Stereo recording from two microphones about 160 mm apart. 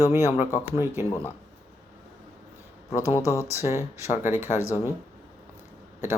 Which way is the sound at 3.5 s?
15° right (ahead or behind).